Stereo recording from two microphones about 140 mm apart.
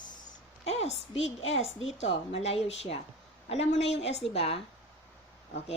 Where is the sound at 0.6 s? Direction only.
45° left (ahead or behind).